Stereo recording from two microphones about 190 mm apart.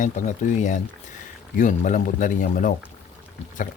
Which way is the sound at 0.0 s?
40° left (ahead or behind).